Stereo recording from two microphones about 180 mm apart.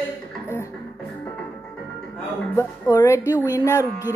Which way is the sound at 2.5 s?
15° left (ahead or behind).